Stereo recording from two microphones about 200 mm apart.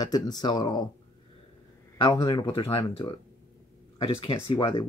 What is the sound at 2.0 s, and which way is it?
Speech, 20° left (ahead or behind).